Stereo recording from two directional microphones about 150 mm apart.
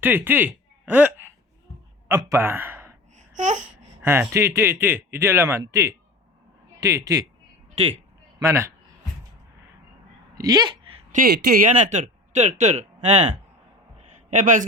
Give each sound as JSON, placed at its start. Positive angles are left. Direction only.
{"t": 0.0, "sound": "speech", "side_deg": -15}
{"t": 3.2, "sound": "babbling", "side_deg": -55}
{"t": 4.0, "sound": "speech", "side_deg": -15}
{"t": 8.4, "sound": "speech", "side_deg": -20}
{"t": 10.3, "sound": "speech", "side_deg": -25}
{"t": 11.1, "sound": "speech", "side_deg": -80}
{"t": 11.7, "sound": "speech", "side_deg": -55}